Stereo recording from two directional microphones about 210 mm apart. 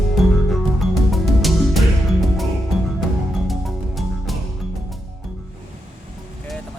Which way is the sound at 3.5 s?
Centre (ahead or behind).